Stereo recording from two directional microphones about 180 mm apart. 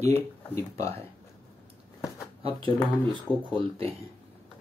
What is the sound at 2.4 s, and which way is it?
Speech, 30° right (ahead or behind).